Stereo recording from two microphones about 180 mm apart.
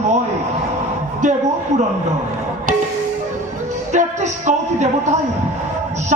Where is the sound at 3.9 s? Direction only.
40° right (ahead or behind).